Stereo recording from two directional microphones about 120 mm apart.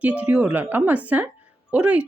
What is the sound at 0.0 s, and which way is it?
Speech, 10° right (ahead or behind).